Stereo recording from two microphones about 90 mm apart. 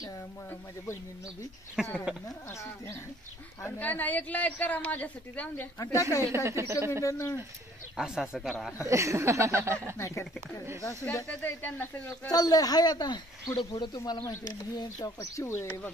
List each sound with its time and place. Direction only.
1.8 s speech: 10° right (ahead or behind)
3.6 s a woman's voice: 20° left (ahead or behind)
5.8 s speech: 35° left (ahead or behind)
6.3 s a woman's voice: 30° right (ahead or behind)
7.1 s speech: 35° left (ahead or behind)
7.9 s speech: 5° right (ahead or behind)
8.8 s speech: 35° right (ahead or behind)
9.9 s speech: 35° left (ahead or behind)
11.4 s speech: 25° left (ahead or behind)
12.3 s speech: 45° left (ahead or behind)
13.6 s speech: 70° left (ahead or behind)
14.0 s speech: 45° left (ahead or behind)
15.3 s speech: 30° left (ahead or behind)